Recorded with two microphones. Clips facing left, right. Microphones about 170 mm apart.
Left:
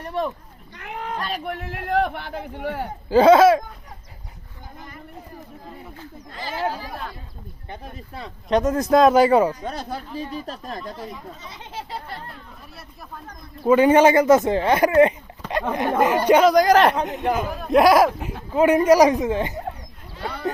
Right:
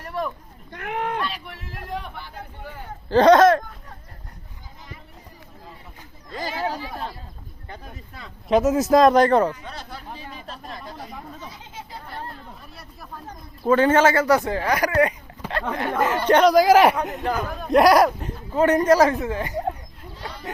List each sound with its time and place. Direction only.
0.0 s speech: 25° left (ahead or behind)
0.7 s speech: 55° right (ahead or behind)
1.2 s speech: 50° left (ahead or behind); by 2.8 s 70° left (ahead or behind)
3.1 s speech: 5° left (ahead or behind)
7.7 s speech: 30° left (ahead or behind)
8.4 s speech: 5° right (ahead or behind)
9.5 s speech: 40° left (ahead or behind)
11.3 s chatter: 75° left (ahead or behind)
13.6 s speech: 15° left (ahead or behind); by 17.0 s 10° right (ahead or behind)
17.4 s speech: 5° left (ahead or behind); by 19.5 s 20° left (ahead or behind)
20.1 s a sound: 60° left (ahead or behind)